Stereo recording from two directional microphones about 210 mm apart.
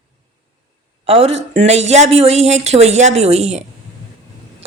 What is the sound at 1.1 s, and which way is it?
A woman's voice, 30° right (ahead or behind).